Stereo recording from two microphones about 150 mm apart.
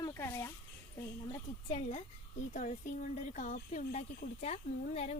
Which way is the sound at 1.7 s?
55° left (ahead or behind).